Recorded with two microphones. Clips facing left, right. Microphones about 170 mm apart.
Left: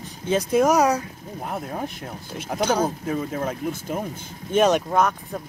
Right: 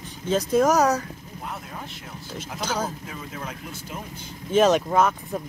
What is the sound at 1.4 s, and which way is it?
Speech, 50° left (ahead or behind).